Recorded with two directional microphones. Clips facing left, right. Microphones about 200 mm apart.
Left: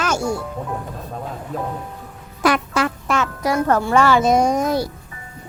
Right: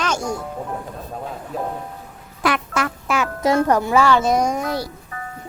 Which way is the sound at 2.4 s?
35° left (ahead or behind).